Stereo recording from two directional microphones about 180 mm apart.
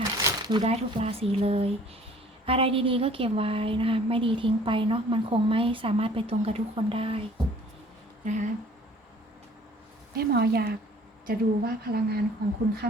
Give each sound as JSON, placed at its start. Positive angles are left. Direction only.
{"t": 0.2, "sound": "a sound", "side_deg": -20}
{"t": 0.6, "sound": "a woman's voice", "side_deg": -35}
{"t": 8.2, "sound": "speech", "side_deg": -45}
{"t": 10.2, "sound": "a woman's voice", "side_deg": -60}